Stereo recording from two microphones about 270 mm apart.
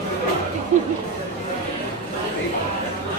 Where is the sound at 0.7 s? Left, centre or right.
Right.